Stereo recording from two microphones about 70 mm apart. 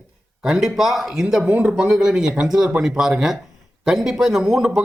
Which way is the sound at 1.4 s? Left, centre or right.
Right.